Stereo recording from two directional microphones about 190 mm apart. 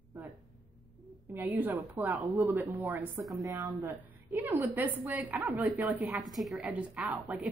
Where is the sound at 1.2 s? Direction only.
10° right (ahead or behind).